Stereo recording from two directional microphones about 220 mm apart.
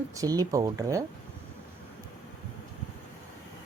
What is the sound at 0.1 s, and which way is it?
Speech, 15° right (ahead or behind).